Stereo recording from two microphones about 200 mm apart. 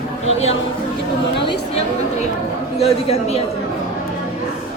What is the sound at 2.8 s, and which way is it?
Speech, 30° left (ahead or behind).